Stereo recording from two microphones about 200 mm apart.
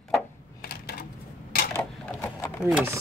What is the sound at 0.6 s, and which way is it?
Typewriter, 50° left (ahead or behind).